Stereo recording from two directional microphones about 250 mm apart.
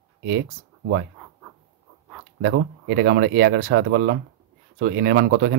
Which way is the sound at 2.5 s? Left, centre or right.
Right.